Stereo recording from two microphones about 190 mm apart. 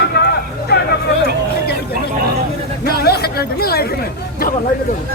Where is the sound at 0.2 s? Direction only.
60° left (ahead or behind).